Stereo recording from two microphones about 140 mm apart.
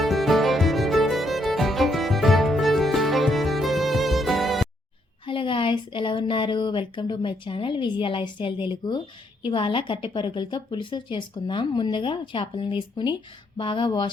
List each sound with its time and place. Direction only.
0.0 s music: centre (ahead or behind)
5.2 s a woman's voice: 35° left (ahead or behind)